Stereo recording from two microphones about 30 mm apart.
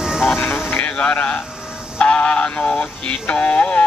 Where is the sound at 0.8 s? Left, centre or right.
Left.